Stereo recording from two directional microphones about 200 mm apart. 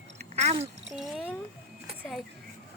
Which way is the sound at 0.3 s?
35° right (ahead or behind).